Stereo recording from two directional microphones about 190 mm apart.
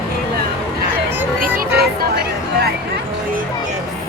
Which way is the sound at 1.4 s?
50° right (ahead or behind).